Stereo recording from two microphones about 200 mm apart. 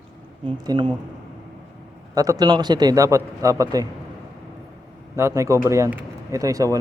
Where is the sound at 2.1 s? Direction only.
15° right (ahead or behind).